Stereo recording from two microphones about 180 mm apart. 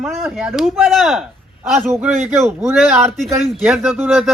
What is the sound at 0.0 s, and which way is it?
A man's voice, centre (ahead or behind).